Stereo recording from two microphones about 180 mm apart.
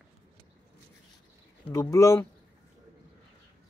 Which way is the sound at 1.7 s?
15° left (ahead or behind).